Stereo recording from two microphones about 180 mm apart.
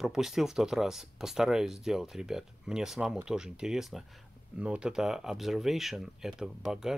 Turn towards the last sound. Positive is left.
turn(degrees=-5)  # may be behind; listen again after turning